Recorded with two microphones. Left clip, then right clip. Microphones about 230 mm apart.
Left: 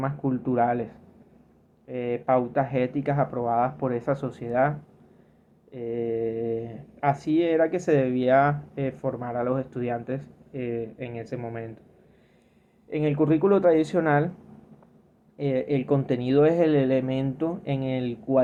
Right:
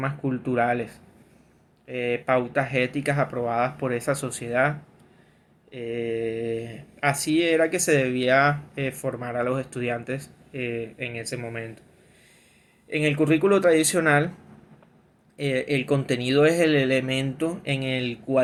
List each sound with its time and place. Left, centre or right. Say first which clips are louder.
0.0 s speech: even; right
5.7 s speech: even; right
12.9 s speech: right 1 dB; right
15.4 s speech: right 1 dB; right